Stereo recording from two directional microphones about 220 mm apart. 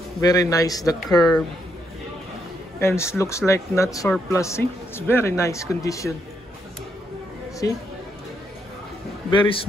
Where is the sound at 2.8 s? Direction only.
10° left (ahead or behind).